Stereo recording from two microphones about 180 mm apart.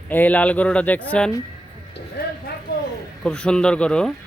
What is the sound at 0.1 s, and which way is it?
Speech, 10° left (ahead or behind).